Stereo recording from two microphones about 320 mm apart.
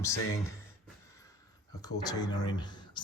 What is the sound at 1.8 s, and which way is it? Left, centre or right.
Speech, centre.